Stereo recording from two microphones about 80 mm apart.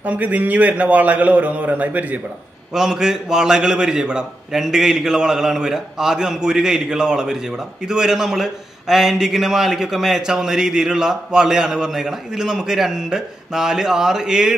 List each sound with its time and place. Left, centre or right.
0.0 s a man's voice: centre
2.7 s a man's voice: centre